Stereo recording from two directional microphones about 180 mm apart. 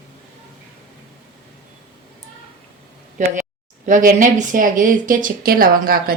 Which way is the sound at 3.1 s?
45° right (ahead or behind).